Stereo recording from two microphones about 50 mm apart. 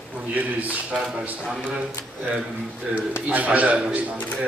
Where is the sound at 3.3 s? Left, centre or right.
Right.